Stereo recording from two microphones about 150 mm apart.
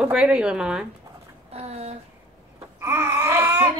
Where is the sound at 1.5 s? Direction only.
40° right (ahead or behind).